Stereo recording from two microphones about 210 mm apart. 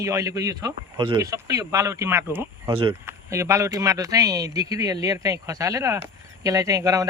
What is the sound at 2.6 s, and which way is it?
Speech, 25° right (ahead or behind).